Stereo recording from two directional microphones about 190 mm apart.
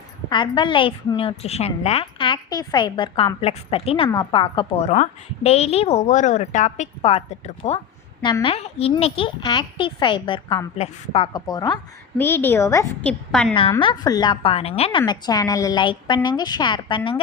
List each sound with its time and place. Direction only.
0.3 s a woman's voice: 25° left (ahead or behind); by 13.5 s 5° left (ahead or behind)
13.5 s a woman's voice: 25° left (ahead or behind)